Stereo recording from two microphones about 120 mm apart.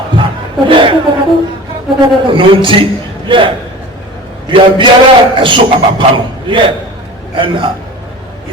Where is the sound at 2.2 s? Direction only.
45° right (ahead or behind).